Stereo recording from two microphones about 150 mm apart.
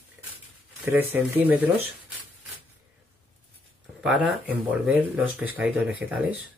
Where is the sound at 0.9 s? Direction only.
15° right (ahead or behind).